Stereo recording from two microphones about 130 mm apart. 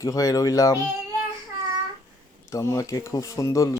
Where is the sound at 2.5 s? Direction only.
25° left (ahead or behind).